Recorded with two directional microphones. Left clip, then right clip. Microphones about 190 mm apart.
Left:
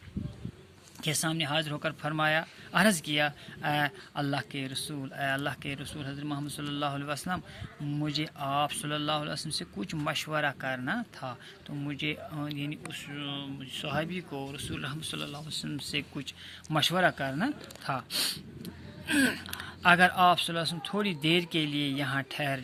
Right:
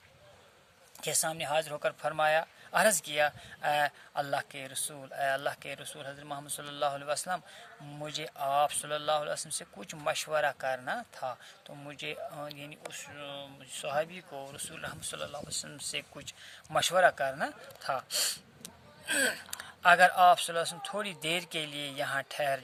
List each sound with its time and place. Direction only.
1.0 s speech: 40° right (ahead or behind)
5.0 s speech: 35° right (ahead or behind)